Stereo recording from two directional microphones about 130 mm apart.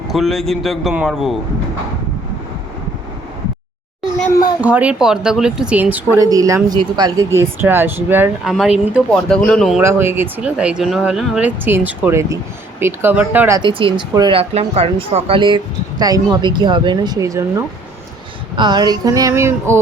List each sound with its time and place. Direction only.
0.1 s a man's voice: centre (ahead or behind)
4.6 s speech: 10° right (ahead or behind)
6.1 s a sound: 25° right (ahead or behind)
6.7 s speech: 30° right (ahead or behind)
7.3 s speech: 20° right (ahead or behind)
8.4 s a man's voice: 5° right (ahead or behind)
9.1 s a man's voice: 5° left (ahead or behind)
9.8 s speech: 20° right (ahead or behind)
13.6 s speech: 40° right (ahead or behind)
14.3 s speech: 50° right (ahead or behind); by 17.6 s 25° right (ahead or behind)
18.5 s a sound: 35° right (ahead or behind); by 19.8 s 20° right (ahead or behind)